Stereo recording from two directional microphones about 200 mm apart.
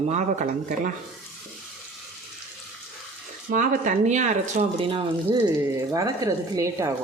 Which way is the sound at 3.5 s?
40° right (ahead or behind).